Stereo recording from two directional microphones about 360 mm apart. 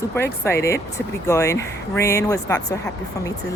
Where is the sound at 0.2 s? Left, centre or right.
Centre.